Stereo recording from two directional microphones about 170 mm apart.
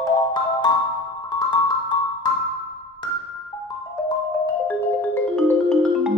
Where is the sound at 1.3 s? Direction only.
25° left (ahead or behind).